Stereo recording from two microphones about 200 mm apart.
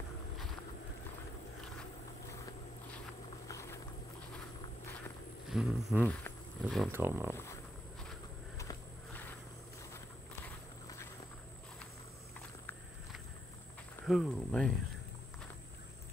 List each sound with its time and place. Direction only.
2.2 s a sound: 15° left (ahead or behind)
3.4 s vehicle: 15° left (ahead or behind)
5.5 s speech: 5° right (ahead or behind)
6.9 s speech: 10° right (ahead or behind)
8.5 s walk: 10° left (ahead or behind)
12.4 s a sound: 5° left (ahead or behind)
14.0 s speech: centre (ahead or behind)